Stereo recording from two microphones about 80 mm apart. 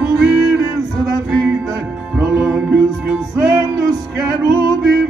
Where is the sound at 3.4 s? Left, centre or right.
Right.